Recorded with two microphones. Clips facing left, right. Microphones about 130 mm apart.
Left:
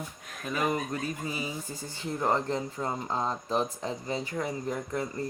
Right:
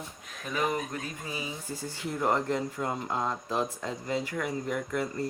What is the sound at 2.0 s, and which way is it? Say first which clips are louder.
Speech: even; 20° left (ahead or behind).